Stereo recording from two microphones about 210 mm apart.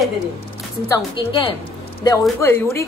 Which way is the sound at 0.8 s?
20° left (ahead or behind).